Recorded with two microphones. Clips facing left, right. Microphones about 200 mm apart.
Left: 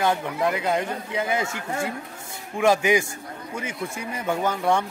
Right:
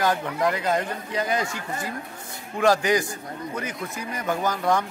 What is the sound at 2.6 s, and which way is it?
Speech, 10° left (ahead or behind).